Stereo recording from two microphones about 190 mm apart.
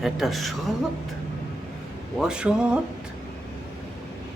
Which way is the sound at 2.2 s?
5° right (ahead or behind).